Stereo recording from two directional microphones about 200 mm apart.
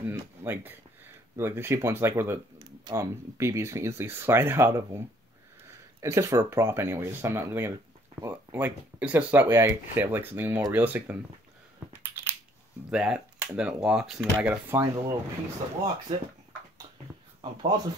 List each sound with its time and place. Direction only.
0.0 s speech: 10° right (ahead or behind)
11.9 s a sound: 10° right (ahead or behind)
12.9 s speech: 5° right (ahead or behind)
17.4 s speech: 25° right (ahead or behind)